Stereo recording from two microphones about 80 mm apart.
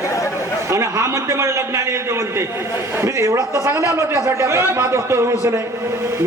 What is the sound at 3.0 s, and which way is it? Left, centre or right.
A man's voice, right.